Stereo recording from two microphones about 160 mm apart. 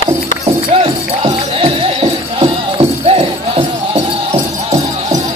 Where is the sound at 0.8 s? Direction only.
35° right (ahead or behind).